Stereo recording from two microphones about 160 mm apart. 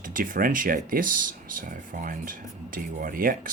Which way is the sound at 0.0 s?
60° right (ahead or behind).